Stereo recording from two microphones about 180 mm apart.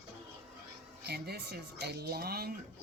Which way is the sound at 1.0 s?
65° right (ahead or behind).